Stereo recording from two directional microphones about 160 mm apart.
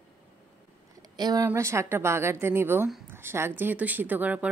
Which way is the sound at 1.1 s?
25° right (ahead or behind).